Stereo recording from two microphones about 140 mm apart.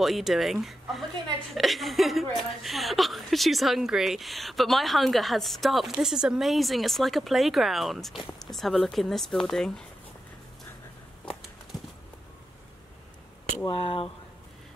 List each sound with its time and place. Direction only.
0.0 s a woman's voice: centre (ahead or behind)
13.7 s speech: 45° left (ahead or behind)